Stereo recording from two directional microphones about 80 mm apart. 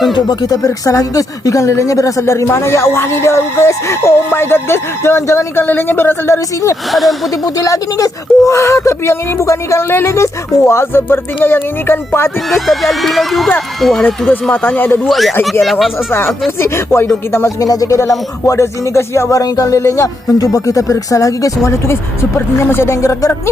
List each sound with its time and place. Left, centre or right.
0.1 s speech: left
5.6 s a woman's voice: left
6.9 s speech: centre
7.4 s a woman's voice: left
12.5 s speech: centre
14.5 s a woman's voice: left
15.0 s speech: centre
16.6 s speech: left
17.7 s speech: left
19.4 s speech: left